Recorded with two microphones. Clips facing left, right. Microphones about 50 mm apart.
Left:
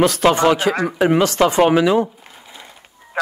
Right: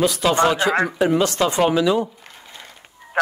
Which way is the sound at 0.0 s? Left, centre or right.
Left.